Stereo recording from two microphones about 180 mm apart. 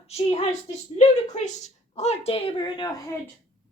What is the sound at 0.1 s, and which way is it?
A woman's voice, 35° left (ahead or behind).